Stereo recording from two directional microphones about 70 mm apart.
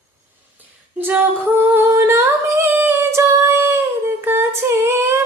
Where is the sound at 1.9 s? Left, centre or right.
Right.